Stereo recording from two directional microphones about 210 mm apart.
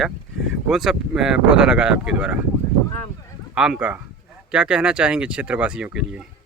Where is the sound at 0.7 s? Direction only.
Centre (ahead or behind).